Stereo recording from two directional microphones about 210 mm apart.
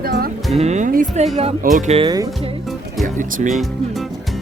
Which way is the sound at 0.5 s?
30° right (ahead or behind).